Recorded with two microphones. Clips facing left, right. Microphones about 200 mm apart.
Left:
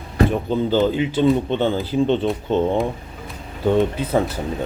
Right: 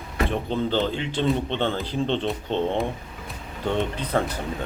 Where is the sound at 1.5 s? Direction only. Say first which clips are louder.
Left 6 dB; 45° left (ahead or behind).